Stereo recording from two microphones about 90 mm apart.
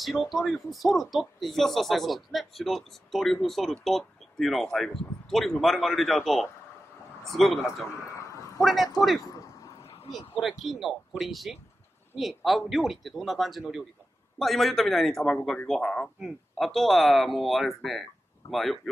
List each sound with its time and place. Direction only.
0.0 s speech: centre (ahead or behind)
8.1 s a sound: 35° left (ahead or behind)
8.6 s speech: centre (ahead or behind)
10.6 s speech: centre (ahead or behind)